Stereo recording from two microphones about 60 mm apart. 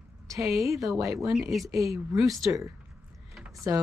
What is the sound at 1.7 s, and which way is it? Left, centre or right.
Speech, right.